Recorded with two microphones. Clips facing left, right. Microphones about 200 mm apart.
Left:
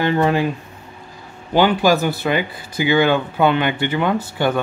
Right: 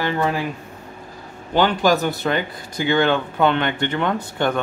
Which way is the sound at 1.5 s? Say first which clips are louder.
Left 2 dB; 10° left (ahead or behind).